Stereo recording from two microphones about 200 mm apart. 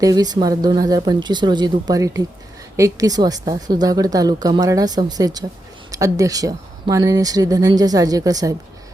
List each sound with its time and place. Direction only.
0.0 s a woman's voice: 20° right (ahead or behind)